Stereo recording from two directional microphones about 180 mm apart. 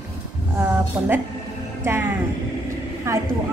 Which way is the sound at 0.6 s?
10° right (ahead or behind).